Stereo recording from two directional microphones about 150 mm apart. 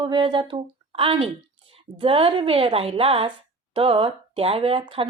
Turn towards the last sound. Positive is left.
turn(degrees=-35)  # may be behind; listen again after turning